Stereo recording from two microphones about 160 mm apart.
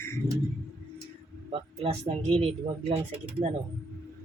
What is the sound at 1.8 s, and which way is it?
Speech, 40° right (ahead or behind).